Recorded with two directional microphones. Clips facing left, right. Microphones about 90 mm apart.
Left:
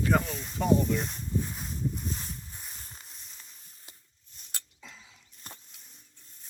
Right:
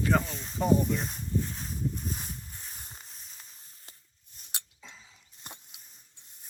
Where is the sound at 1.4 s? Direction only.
10° left (ahead or behind).